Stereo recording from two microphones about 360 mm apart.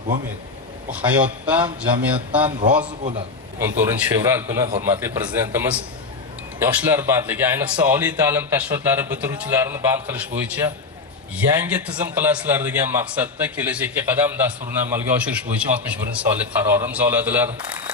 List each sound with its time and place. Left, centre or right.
0.9 s a man's voice: centre
3.0 s a man's voice: centre